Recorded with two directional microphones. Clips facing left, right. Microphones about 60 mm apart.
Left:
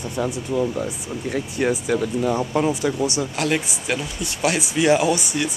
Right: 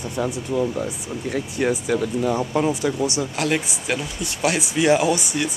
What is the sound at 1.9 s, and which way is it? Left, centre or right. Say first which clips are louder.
Speech: even; left.